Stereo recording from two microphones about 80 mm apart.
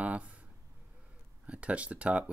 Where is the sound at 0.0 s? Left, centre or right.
Centre.